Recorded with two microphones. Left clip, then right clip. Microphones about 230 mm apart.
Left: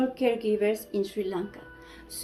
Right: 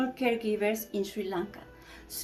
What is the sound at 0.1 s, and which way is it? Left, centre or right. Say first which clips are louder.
A woman's voice: left 3 dB; centre.